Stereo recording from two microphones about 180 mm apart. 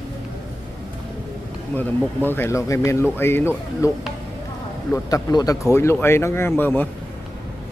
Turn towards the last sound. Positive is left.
turn(degrees=10)  # may be behind; listen again after turning